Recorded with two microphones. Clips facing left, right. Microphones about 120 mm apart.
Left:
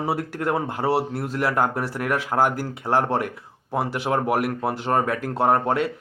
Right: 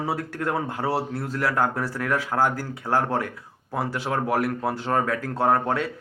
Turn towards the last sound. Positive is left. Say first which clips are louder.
# left 2 dB
turn(degrees=20)  # may be behind; listen again after turning